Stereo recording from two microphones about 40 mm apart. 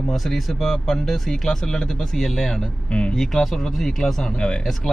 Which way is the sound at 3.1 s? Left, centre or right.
Centre.